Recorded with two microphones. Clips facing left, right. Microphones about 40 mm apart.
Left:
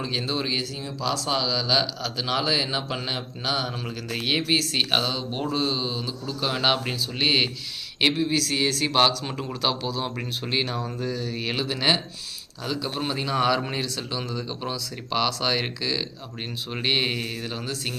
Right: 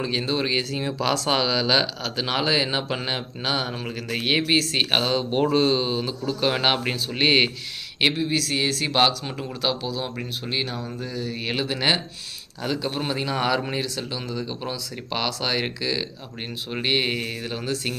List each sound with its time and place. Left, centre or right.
0.0 s speech: centre
0.7 s speech: right
1.3 s speech: right; by 5.1 s centre
5.1 s speech: right
8.0 s speech: centre
11.1 s speech: centre
13.0 s speech: centre